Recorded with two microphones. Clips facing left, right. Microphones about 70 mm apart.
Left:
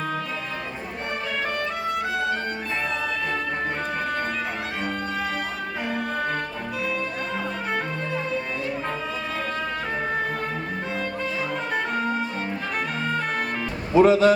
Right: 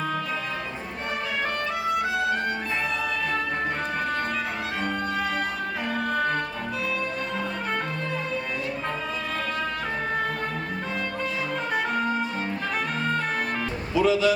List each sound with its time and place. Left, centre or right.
1.9 s music: centre
5.9 s music: centre
11.9 s music: centre
13.9 s speech: left